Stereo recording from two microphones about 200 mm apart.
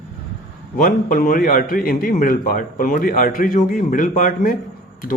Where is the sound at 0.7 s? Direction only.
45° left (ahead or behind).